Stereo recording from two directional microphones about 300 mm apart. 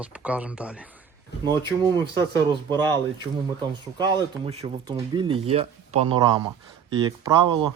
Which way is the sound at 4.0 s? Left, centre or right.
Centre.